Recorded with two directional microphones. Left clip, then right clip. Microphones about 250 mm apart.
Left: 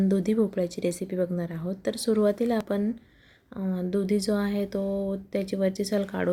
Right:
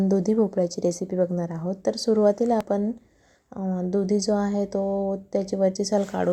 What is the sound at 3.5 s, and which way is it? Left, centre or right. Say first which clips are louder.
Speech: right 3 dB; centre.